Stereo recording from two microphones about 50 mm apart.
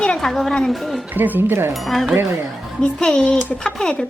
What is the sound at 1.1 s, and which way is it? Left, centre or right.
Speech, right.